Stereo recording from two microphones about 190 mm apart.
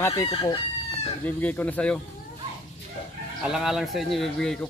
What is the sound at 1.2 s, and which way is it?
Speech, 10° left (ahead or behind).